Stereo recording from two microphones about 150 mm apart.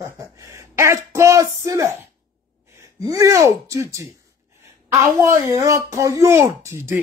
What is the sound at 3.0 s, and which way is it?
Speech, 25° right (ahead or behind).